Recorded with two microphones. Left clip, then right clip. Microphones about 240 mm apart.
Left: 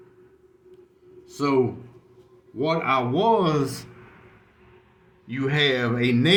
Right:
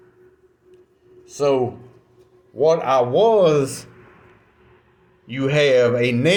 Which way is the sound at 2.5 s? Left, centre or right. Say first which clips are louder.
Right 7 dB; centre.